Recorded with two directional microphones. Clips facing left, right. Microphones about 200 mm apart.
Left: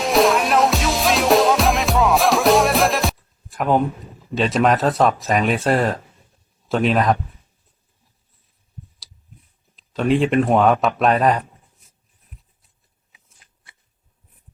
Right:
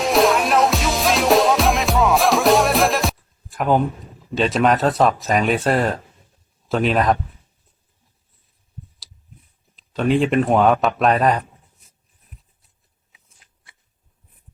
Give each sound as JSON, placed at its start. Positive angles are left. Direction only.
{"t": 0.0, "sound": "music", "side_deg": 0}
{"t": 4.3, "sound": "speech", "side_deg": 0}
{"t": 9.7, "sound": "speech", "side_deg": 0}
{"t": 13.1, "sound": "shuffling cards", "side_deg": 0}